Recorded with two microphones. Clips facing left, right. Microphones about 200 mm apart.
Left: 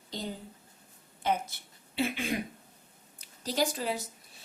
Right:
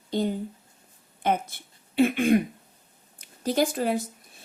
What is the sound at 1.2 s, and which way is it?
A woman's voice, 55° right (ahead or behind).